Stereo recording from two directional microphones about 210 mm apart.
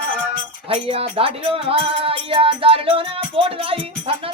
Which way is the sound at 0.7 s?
25° right (ahead or behind).